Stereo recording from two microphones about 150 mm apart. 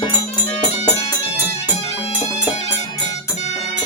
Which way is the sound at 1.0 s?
20° left (ahead or behind).